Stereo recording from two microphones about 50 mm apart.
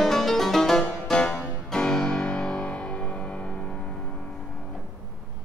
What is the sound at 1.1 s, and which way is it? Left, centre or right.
Music, left.